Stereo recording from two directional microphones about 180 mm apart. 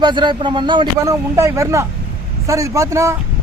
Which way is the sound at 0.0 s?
25° right (ahead or behind).